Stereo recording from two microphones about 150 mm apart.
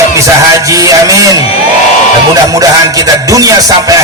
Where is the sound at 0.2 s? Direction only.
20° right (ahead or behind).